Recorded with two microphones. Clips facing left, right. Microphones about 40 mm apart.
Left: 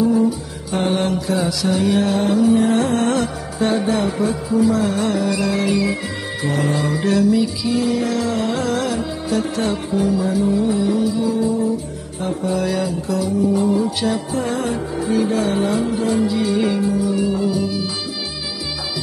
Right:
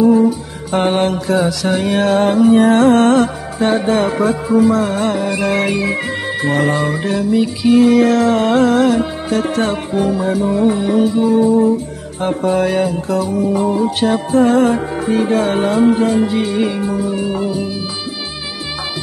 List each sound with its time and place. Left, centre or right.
0.0 s music: right
5.5 s music: right
7.0 s music: right
7.6 s music: right
10.4 s music: right
17.5 s music: right